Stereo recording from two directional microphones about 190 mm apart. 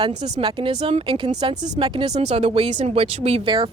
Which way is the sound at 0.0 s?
25° right (ahead or behind).